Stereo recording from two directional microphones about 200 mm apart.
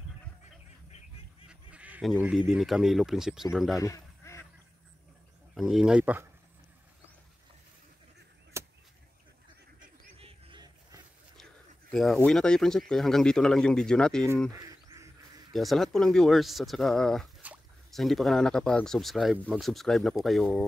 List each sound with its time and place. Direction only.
1.5 s speech: 5° right (ahead or behind)
3.8 s duck: 15° left (ahead or behind)
5.5 s speech: centre (ahead or behind)
8.5 s vehicle: 15° right (ahead or behind)
9.8 s goose: 25° right (ahead or behind)
11.9 s speech: centre (ahead or behind)
14.5 s duck: 15° right (ahead or behind)
15.5 s speech: centre (ahead or behind)